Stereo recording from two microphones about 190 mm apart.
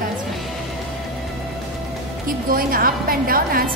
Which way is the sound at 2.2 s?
50° right (ahead or behind).